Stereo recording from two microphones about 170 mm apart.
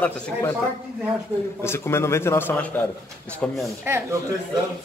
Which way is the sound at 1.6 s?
15° left (ahead or behind).